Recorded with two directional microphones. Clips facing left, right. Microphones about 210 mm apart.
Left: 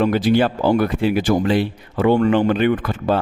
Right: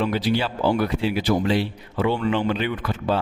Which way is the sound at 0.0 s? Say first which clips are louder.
Left 6 dB; 50° left (ahead or behind).